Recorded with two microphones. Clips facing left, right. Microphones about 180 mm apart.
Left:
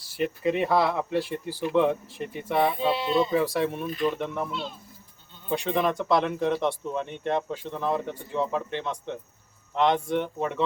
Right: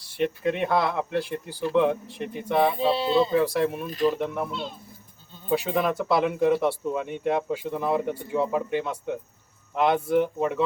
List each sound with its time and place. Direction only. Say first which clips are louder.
0.0 s speech: right 1 dB; centre (ahead or behind)
2.9 s speech: right 2 dB; 30° right (ahead or behind)
3.2 s speech: right 2 dB; centre (ahead or behind)
3.8 s speech: right 3 dB; 40° right (ahead or behind)
4.1 s speech: right 2 dB; centre (ahead or behind)
5.5 s speech: right 1 dB; 5° right (ahead or behind)